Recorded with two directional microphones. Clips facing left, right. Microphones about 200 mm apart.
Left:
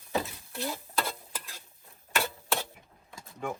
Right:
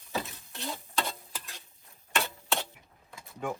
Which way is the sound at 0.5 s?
Centre (ahead or behind).